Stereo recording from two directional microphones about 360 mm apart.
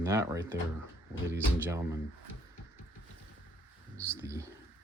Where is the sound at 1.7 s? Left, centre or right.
Centre.